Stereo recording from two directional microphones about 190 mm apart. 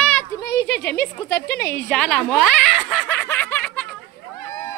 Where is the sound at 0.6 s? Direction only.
60° left (ahead or behind).